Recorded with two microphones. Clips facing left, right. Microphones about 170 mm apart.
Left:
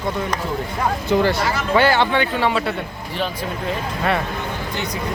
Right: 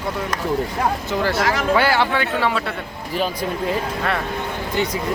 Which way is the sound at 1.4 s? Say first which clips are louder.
Right 2 dB; 90° right.